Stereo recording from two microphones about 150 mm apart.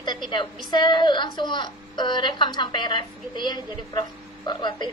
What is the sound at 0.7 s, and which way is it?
A woman's voice, 30° left (ahead or behind).